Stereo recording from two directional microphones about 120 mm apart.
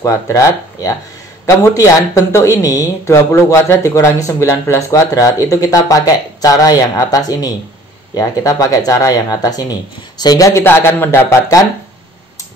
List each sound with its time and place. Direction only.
0.0 s a man's voice: 25° left (ahead or behind)